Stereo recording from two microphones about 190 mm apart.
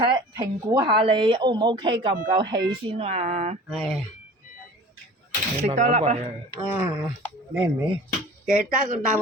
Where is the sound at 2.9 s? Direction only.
30° right (ahead or behind).